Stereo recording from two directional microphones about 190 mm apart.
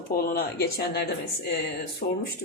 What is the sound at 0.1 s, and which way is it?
A woman's voice, 50° left (ahead or behind).